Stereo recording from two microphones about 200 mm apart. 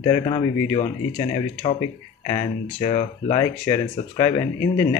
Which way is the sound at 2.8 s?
35° left (ahead or behind).